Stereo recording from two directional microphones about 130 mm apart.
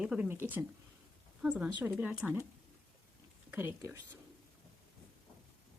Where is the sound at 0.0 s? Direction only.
5° right (ahead or behind).